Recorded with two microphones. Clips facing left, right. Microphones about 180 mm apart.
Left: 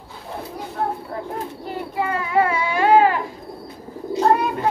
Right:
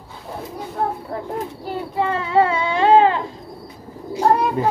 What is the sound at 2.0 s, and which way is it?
Baby cry, 25° right (ahead or behind).